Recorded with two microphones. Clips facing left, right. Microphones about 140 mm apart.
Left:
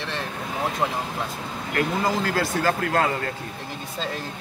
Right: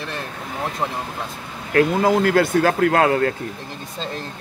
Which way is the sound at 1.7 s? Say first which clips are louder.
Right 8 dB; 65° right (ahead or behind).